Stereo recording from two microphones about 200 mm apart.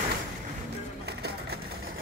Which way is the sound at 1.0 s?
55° right (ahead or behind).